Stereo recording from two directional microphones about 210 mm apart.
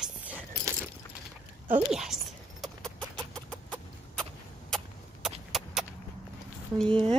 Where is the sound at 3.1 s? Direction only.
5° left (ahead or behind).